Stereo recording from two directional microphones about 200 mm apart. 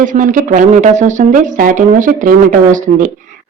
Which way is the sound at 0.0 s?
40° right (ahead or behind).